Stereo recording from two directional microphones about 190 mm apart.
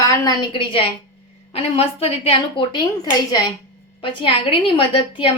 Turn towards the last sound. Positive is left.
turn(degrees=25)  # may be behind; listen again after turning